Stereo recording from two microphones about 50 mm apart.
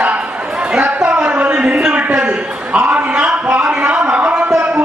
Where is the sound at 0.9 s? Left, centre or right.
Right.